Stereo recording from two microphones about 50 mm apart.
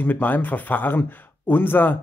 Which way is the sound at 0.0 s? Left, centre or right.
Left.